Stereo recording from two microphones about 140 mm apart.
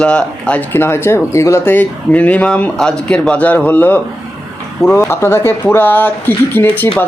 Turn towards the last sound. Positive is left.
turn(degrees=15)  # may be behind; listen again after turning